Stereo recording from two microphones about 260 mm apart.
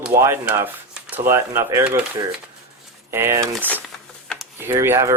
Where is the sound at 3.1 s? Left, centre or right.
Centre.